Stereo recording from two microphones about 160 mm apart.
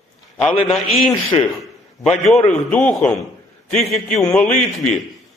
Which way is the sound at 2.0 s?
Centre (ahead or behind).